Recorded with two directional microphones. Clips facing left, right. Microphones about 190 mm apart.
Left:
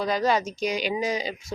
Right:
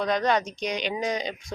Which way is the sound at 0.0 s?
5° left (ahead or behind).